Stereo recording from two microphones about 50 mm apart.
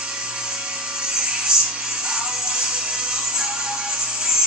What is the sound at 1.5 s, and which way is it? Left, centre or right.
Music, centre.